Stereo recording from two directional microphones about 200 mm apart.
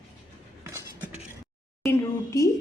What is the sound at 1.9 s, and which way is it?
Speech, 15° left (ahead or behind).